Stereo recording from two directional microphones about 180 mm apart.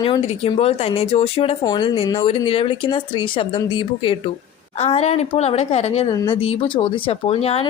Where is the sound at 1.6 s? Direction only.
25° left (ahead or behind).